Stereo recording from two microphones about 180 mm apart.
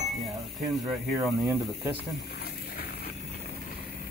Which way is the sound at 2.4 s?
60° left (ahead or behind).